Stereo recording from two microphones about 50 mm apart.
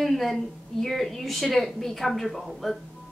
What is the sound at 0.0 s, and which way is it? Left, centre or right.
A woman's voice, centre.